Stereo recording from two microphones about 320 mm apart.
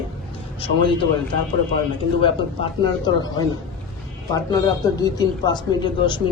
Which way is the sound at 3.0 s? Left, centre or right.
Centre.